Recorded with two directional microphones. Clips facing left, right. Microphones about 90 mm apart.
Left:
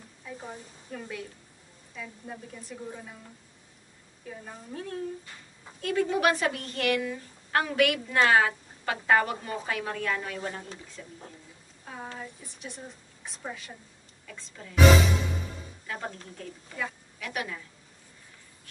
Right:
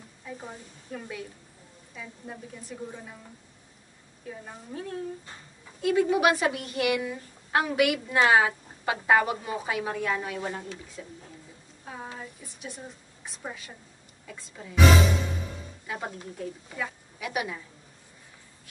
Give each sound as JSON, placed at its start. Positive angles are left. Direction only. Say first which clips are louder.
{"t": 0.2, "sound": "a woman's voice", "louder": "even", "side_deg": 0}
{"t": 4.3, "sound": "a woman's voice", "louder": "right 1 dB", "side_deg": -5}
{"t": 14.2, "sound": "a woman's voice", "louder": "right 2 dB", "side_deg": -15}
{"t": 15.9, "sound": "a woman's voice", "louder": "right 2 dB", "side_deg": -10}